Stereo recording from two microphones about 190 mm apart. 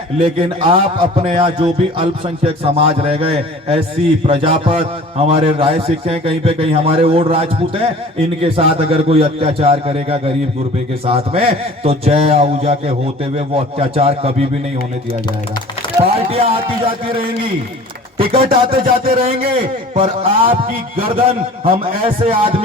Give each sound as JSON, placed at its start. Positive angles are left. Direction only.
{"t": 0.2, "sound": "a man's voice", "side_deg": -30}
{"t": 16.0, "sound": "speech", "side_deg": -30}
{"t": 18.2, "sound": "a man's voice", "side_deg": -30}
{"t": 18.8, "sound": "a sound", "side_deg": -50}
{"t": 19.1, "sound": "speech", "side_deg": -30}